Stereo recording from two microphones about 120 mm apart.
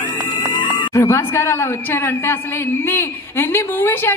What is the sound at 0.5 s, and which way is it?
A woman's voice, 30° left (ahead or behind).